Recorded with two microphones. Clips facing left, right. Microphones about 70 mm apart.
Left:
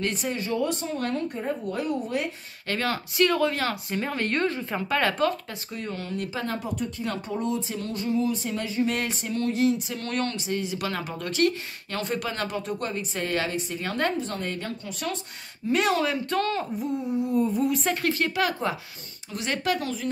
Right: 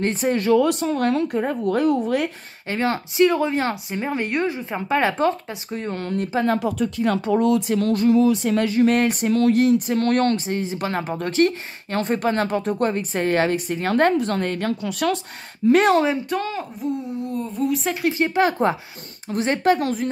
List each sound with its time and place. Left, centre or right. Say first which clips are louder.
0.0 s speech: right 6 dB; right
0.3 s speech: right 12 dB; right
2.7 s speech: right 5 dB; right
6.6 s speech: right 9 dB; right
8.9 s speech: right 10 dB; right
9.3 s speech: right 9 dB; right
9.6 s speech: right 7 dB; right
14.8 s speech: right 10 dB; right
15.7 s speech: right 8 dB; right
16.3 s speech: right 1 dB; centre
16.7 s speech: right 1 dB; centre
18.0 s speech: right 8 dB; centre
18.3 s speech: right 7 dB; right
19.8 s speech: right 8 dB; right